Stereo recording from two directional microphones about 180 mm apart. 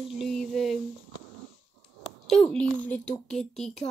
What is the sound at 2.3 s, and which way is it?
Speech, 5° left (ahead or behind).